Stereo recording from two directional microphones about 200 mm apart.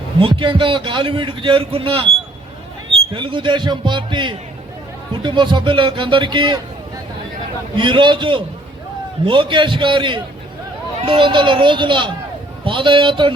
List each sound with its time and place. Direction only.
0.2 s a man's voice: 25° right (ahead or behind)
3.2 s a man's voice: 25° right (ahead or behind)
7.8 s a man's voice: 25° right (ahead or behind)